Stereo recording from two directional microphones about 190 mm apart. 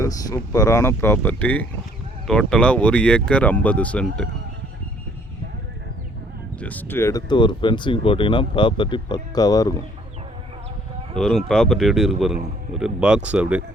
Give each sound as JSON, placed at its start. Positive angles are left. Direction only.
{"t": 0.0, "sound": "speech", "side_deg": 20}
{"t": 6.6, "sound": "speech", "side_deg": 10}
{"t": 11.2, "sound": "speech", "side_deg": 5}